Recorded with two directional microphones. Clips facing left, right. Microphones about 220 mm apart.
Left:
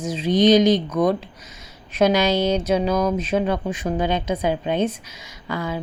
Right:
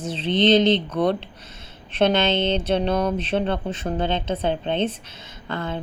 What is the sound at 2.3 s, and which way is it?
Speech, 25° right (ahead or behind).